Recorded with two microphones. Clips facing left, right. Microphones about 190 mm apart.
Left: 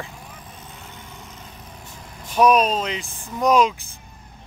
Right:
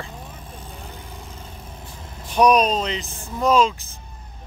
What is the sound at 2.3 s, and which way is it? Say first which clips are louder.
Speech: even; 5° left (ahead or behind).